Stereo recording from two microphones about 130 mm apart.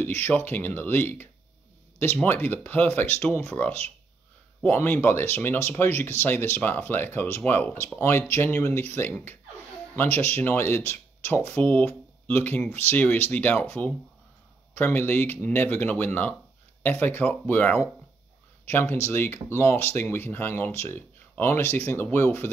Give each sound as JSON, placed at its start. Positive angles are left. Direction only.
{"t": 0.0, "sound": "speech", "side_deg": 15}